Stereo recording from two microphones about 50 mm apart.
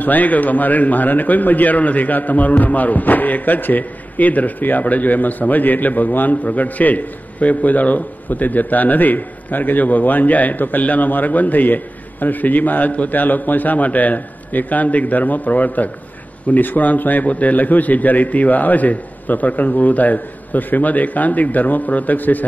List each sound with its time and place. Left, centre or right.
0.0 s a man's voice: left